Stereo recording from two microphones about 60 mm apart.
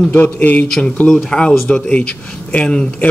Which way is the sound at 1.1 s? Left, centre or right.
Centre.